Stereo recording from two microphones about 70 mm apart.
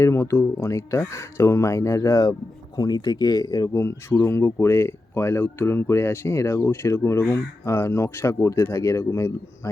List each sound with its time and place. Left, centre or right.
0.0 s speech: left
2.7 s speech: left
3.7 s speech: left